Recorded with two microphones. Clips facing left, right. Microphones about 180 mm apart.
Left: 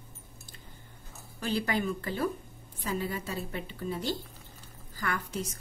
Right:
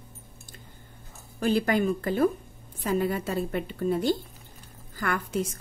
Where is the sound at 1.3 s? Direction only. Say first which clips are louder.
Right 7 dB; 50° right (ahead or behind).